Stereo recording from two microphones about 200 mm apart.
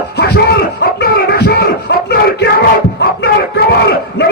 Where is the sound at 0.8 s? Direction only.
55° left (ahead or behind).